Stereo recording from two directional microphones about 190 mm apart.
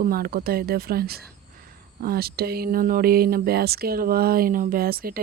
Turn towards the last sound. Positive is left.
turn(degrees=-50)  # may be behind; listen again after turning